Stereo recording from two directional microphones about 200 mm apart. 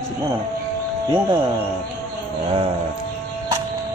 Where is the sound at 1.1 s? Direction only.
20° right (ahead or behind).